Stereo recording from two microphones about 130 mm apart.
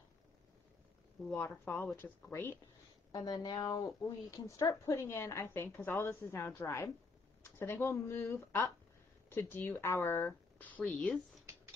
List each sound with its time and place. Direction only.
1.3 s speech: 15° left (ahead or behind)
3.1 s a woman's voice: 30° left (ahead or behind); by 11.4 s 5° left (ahead or behind)